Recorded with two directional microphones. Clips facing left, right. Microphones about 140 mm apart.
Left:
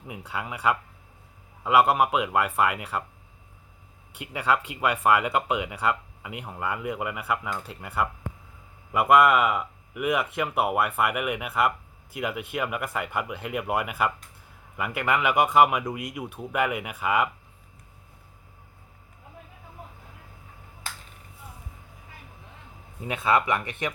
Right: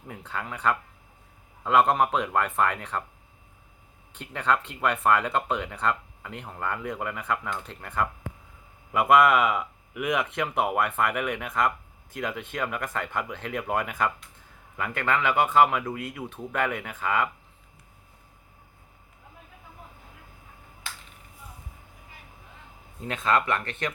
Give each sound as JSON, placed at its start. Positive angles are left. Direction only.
{"t": 0.1, "sound": "speech", "side_deg": 10}
{"t": 4.1, "sound": "speech", "side_deg": 10}
{"t": 20.9, "sound": "finger snapping", "side_deg": 40}
{"t": 23.0, "sound": "speech", "side_deg": 10}